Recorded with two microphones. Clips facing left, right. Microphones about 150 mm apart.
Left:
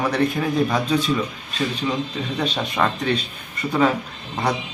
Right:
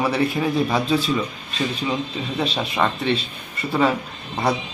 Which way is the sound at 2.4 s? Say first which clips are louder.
Even; 5° right (ahead or behind).